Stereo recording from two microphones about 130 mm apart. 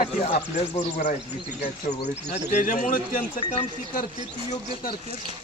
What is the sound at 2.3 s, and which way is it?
Speech, 75° left (ahead or behind).